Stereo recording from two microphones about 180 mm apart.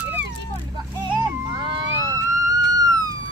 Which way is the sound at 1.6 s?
30° right (ahead or behind).